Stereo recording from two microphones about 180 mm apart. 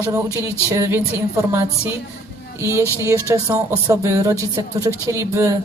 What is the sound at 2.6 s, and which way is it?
A woman's voice, 15° right (ahead or behind).